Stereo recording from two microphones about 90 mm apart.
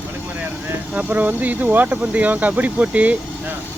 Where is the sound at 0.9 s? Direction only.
20° right (ahead or behind).